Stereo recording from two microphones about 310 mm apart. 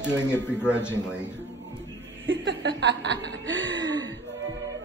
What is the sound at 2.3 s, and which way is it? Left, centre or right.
Chuckle, right.